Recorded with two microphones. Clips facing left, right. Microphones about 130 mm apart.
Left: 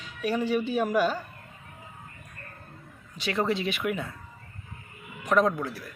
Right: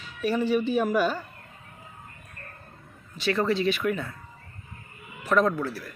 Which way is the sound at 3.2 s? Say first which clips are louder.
Right 3 dB; 15° left (ahead or behind).